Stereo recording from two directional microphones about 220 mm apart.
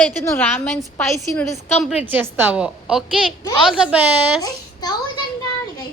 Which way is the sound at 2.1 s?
10° right (ahead or behind).